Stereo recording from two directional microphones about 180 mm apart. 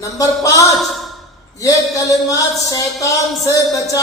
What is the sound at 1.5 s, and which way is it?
Speech, 20° left (ahead or behind).